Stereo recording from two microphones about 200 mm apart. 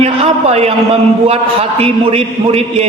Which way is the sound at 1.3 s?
30° right (ahead or behind).